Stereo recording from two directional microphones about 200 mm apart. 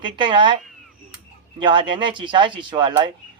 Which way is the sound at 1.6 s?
25° right (ahead or behind).